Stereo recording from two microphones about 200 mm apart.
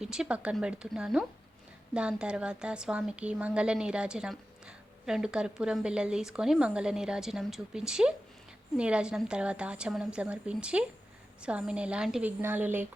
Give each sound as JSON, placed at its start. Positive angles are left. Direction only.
{"t": 0.0, "sound": "a woman's voice", "side_deg": -5}